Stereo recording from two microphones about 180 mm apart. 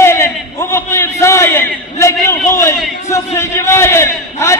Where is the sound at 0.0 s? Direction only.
15° left (ahead or behind).